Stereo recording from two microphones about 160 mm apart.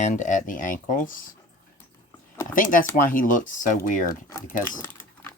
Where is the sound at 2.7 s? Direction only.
60° left (ahead or behind).